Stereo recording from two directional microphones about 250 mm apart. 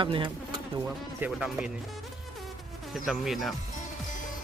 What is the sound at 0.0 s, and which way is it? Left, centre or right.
Speech, centre.